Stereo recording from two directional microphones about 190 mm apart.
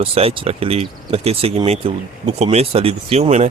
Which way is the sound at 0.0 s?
30° right (ahead or behind).